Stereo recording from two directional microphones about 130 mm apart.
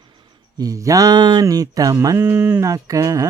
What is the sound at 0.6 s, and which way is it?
Speech, 25° right (ahead or behind).